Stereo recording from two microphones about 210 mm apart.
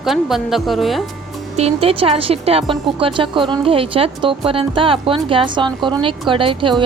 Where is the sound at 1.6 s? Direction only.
30° right (ahead or behind).